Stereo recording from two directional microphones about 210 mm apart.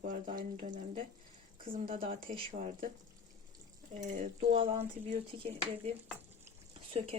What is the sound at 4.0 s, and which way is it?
Speech, 35° right (ahead or behind).